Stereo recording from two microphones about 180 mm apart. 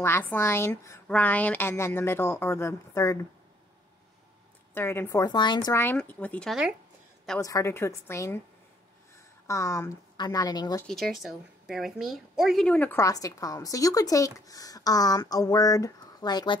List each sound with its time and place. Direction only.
0.0 s a woman's voice: 10° left (ahead or behind)
4.7 s a woman's voice: 15° left (ahead or behind)
5.8 s a woman's voice: 10° left (ahead or behind)
7.3 s a woman's voice: 15° left (ahead or behind)
9.5 s a woman's voice: 15° left (ahead or behind)
10.9 s a woman's voice: centre (ahead or behind); by 16.5 s 20° left (ahead or behind)